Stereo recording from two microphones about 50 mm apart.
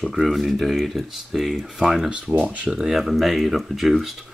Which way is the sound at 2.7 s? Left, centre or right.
Centre.